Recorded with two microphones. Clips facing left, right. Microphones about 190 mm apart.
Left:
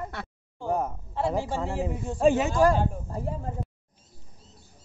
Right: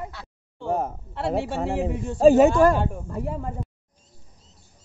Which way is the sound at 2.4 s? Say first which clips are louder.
Right 5 dB; 60° right (ahead or behind).